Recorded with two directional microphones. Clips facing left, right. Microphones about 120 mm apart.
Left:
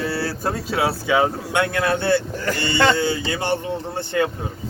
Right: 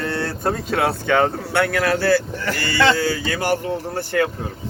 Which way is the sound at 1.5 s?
20° left (ahead or behind).